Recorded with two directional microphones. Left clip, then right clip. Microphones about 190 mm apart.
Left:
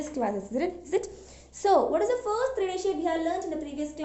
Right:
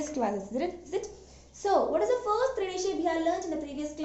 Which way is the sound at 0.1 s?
10° left (ahead or behind).